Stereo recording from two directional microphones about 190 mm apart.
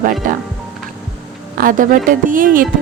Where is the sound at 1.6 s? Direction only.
45° right (ahead or behind).